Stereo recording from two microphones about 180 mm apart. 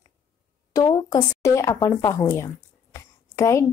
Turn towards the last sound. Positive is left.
turn(degrees=15)  # may be behind; listen again after turning